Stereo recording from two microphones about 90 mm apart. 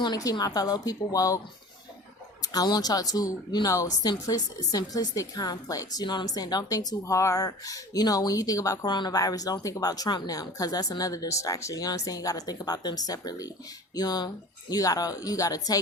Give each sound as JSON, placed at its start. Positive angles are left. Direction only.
{"t": 0.0, "sound": "speech", "side_deg": 45}
{"t": 2.4, "sound": "speech", "side_deg": 45}